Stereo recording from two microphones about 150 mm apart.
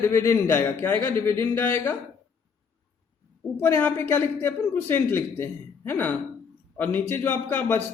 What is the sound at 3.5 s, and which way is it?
A man's voice, 10° left (ahead or behind).